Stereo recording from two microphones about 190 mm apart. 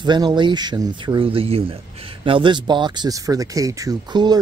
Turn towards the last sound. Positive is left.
turn(degrees=-20)  # may be behind; listen again after turning